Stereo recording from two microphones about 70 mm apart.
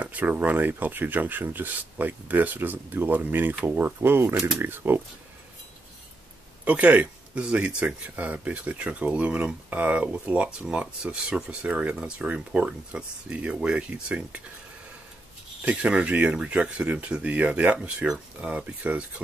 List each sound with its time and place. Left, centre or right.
0.0 s speech: right
6.6 s speech: centre
15.6 s speech: centre